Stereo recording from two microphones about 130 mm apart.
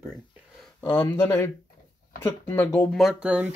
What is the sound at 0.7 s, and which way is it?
Speech, 15° left (ahead or behind).